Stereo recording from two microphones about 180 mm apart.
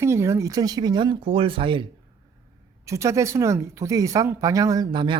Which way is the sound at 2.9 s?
15° right (ahead or behind).